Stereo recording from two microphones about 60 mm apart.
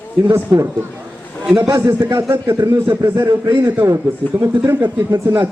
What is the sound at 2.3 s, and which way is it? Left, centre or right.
A man's voice, right.